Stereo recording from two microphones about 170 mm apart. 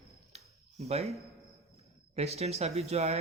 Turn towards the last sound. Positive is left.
turn(degrees=-40)  # may be behind; listen again after turning